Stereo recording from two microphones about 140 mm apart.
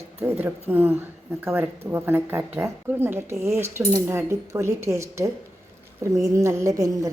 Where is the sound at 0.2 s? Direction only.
15° right (ahead or behind).